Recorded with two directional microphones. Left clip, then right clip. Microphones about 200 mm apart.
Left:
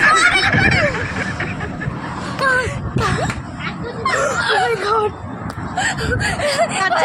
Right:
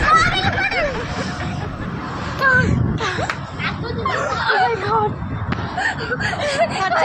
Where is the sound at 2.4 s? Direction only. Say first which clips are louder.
Right 1 dB; 25° left (ahead or behind).